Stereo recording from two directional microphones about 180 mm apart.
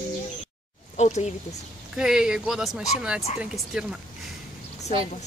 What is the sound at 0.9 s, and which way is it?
Speech, 40° left (ahead or behind).